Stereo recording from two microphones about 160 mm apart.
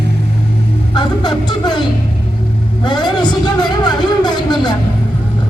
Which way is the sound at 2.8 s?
30° left (ahead or behind).